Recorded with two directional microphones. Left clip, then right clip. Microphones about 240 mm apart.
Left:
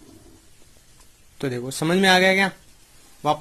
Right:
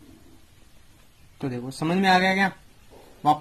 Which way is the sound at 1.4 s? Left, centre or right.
Left.